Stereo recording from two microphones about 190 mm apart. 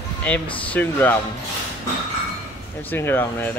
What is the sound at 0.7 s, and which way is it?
Speech, 10° left (ahead or behind).